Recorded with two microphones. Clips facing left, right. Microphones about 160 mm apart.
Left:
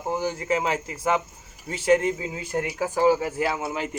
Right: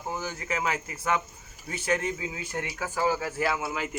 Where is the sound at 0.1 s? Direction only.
35° left (ahead or behind).